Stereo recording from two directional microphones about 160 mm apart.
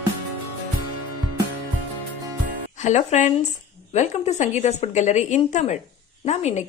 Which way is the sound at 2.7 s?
45° left (ahead or behind).